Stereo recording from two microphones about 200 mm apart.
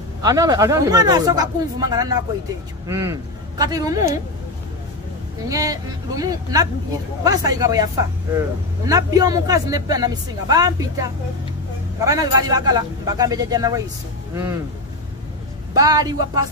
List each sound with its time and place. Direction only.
0.2 s speech: 15° right (ahead or behind)
5.5 s speech: 15° right (ahead or behind)
15.7 s speech: 20° right (ahead or behind)